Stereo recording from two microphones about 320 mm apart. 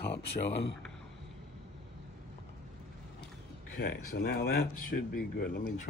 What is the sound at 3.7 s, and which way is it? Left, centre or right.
Speech, left.